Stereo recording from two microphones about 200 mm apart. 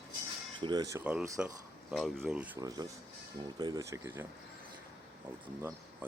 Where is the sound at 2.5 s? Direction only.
20° right (ahead or behind).